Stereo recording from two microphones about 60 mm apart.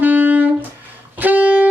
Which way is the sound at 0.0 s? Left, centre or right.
Right.